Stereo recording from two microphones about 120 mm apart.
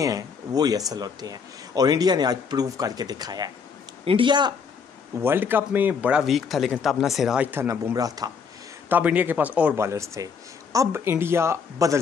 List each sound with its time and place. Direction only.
0.0 s speech: 30° right (ahead or behind)
4.0 s speech: 45° right (ahead or behind)
5.2 s speech: 15° right (ahead or behind)
7.6 s speech: 25° right (ahead or behind)
8.8 s speech: 15° right (ahead or behind)
9.8 s speech: 25° right (ahead or behind)